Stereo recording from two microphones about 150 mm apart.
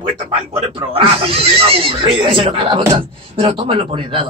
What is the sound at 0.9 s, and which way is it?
A man's voice, 35° right (ahead or behind).